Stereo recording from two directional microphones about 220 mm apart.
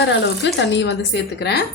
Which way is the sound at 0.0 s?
55° left (ahead or behind).